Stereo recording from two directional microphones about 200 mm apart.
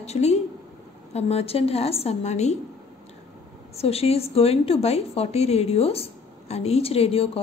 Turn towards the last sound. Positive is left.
turn(degrees=30)  # may be behind; listen again after turning